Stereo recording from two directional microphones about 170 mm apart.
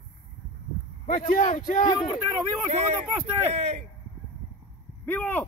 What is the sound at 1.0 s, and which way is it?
Speech, 50° left (ahead or behind).